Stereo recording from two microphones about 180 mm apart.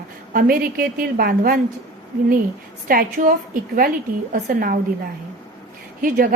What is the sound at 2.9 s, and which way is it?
A woman's voice, 50° right (ahead or behind).